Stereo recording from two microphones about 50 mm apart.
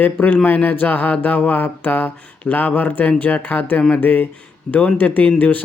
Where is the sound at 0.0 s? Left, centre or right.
Left.